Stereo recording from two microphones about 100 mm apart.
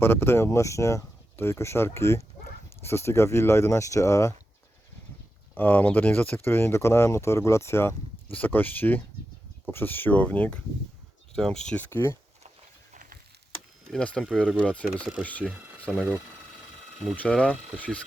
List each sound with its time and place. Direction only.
0.0 s speech: 25° left (ahead or behind)
5.5 s speech: 20° left (ahead or behind)
11.9 s speech: 20° left (ahead or behind)
13.9 s speech: 10° left (ahead or behind)
15.9 s speech: 5° left (ahead or behind)
17.2 s speech: 10° left (ahead or behind)